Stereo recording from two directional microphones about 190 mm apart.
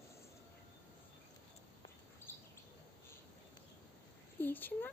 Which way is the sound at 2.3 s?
10° left (ahead or behind).